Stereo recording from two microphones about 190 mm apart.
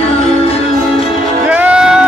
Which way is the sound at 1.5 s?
5° right (ahead or behind).